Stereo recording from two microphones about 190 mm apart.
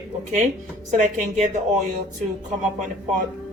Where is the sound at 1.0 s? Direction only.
40° right (ahead or behind).